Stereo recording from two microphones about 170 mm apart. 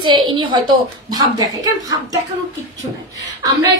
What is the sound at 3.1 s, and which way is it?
Speech, 20° right (ahead or behind).